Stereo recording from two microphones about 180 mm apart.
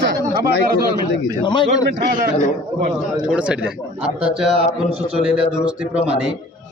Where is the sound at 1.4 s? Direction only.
25° left (ahead or behind).